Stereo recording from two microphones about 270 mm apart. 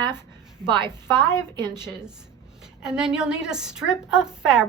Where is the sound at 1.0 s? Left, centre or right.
Centre.